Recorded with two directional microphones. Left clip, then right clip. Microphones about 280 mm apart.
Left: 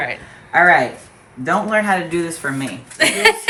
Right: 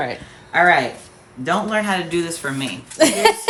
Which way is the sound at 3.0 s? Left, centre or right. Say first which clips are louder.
Left 1 dB; centre.